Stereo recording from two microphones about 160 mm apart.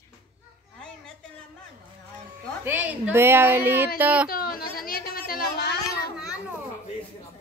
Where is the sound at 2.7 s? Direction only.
10° right (ahead or behind).